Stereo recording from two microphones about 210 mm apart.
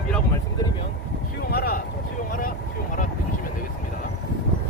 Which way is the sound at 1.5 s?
45° left (ahead or behind).